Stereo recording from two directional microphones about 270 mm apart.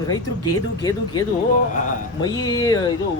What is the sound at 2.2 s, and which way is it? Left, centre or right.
Speech, centre.